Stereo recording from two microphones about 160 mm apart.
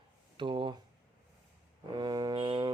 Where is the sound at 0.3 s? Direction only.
30° right (ahead or behind).